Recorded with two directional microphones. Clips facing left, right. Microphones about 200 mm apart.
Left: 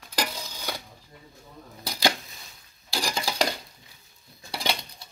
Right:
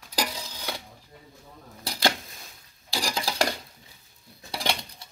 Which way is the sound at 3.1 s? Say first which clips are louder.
Even; centre (ahead or behind).